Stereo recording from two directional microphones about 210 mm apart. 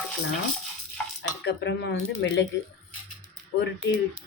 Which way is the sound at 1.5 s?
55° left (ahead or behind).